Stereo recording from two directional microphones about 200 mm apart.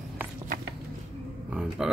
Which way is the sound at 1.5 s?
5° right (ahead or behind).